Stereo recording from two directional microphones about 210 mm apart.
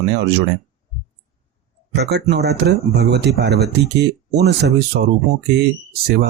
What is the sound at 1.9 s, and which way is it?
Speech, 50° right (ahead or behind).